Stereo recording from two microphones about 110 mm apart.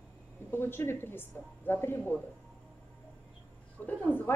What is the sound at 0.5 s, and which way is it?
A woman's voice, 20° left (ahead or behind).